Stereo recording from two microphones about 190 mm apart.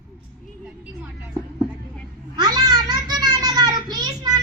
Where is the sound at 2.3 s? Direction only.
20° right (ahead or behind).